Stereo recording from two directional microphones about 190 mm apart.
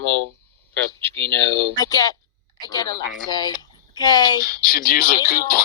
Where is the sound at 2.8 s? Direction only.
50° right (ahead or behind).